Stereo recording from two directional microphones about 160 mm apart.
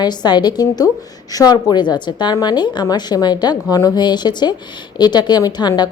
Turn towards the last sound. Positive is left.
turn(degrees=25)  # may be behind; listen again after turning